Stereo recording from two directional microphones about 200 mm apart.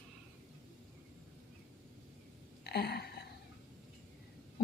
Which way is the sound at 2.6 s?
55° left (ahead or behind).